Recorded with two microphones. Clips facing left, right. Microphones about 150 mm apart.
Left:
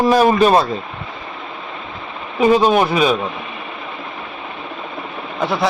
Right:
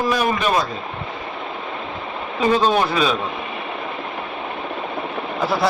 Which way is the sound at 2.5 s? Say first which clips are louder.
Left 4 dB; 15° left (ahead or behind).